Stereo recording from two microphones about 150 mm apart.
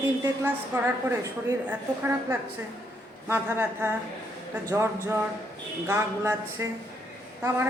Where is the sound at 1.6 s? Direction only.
15° right (ahead or behind).